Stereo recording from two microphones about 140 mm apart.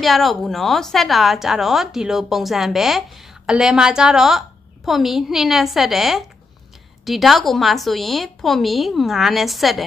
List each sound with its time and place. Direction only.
0.0 s a woman's voice: centre (ahead or behind)